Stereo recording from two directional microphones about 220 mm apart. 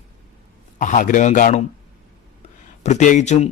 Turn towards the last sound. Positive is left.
turn(degrees=30)  # may be behind; listen again after turning